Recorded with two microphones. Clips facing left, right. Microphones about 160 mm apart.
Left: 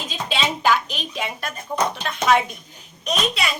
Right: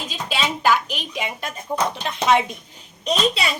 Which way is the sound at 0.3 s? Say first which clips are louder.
Even; 5° right (ahead or behind).